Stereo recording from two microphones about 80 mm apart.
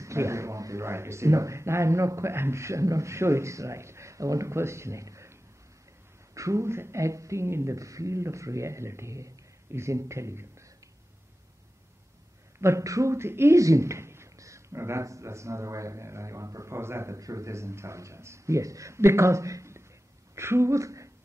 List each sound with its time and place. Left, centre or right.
0.0 s speech: right
12.5 s speech: right